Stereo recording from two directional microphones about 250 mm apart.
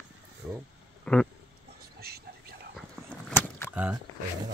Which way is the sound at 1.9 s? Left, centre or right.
Right.